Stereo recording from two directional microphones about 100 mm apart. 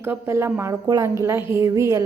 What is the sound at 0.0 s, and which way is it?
A woman's voice, 25° right (ahead or behind).